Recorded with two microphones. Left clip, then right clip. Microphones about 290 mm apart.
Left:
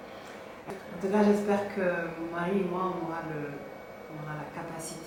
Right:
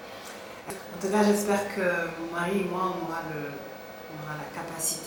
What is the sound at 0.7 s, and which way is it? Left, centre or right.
Speech, centre.